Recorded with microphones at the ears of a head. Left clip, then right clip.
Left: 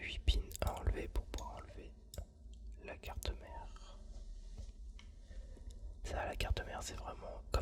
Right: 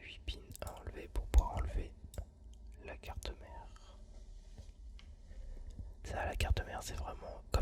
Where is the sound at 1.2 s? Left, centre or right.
Right.